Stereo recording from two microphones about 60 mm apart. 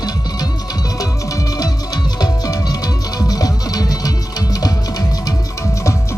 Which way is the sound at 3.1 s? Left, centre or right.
Left.